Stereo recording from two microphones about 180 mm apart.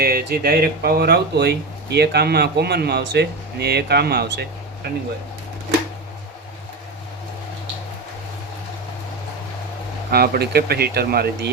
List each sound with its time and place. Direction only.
0.0 s speech: 60° right (ahead or behind)
10.1 s speech: 60° right (ahead or behind)